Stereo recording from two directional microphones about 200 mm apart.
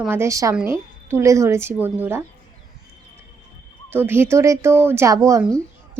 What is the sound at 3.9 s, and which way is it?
Speech, 10° right (ahead or behind).